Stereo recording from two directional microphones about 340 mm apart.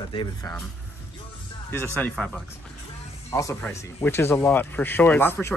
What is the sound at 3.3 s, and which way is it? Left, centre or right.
Speech, centre.